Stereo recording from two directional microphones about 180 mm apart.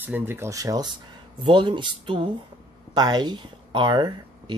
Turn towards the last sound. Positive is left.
turn(degrees=-25)  # may be behind; listen again after turning